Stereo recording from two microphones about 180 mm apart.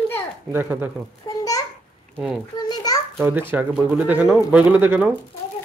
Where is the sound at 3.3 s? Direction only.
10° right (ahead or behind).